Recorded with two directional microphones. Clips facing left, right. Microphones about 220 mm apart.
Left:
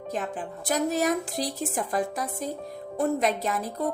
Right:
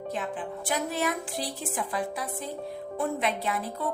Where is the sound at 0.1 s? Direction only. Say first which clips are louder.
Left 2 dB; 40° left (ahead or behind).